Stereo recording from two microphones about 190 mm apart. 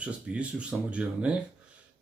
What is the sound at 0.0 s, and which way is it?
Speech, 5° right (ahead or behind).